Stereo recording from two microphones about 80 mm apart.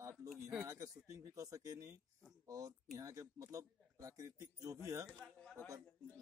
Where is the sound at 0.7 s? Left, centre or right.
Right.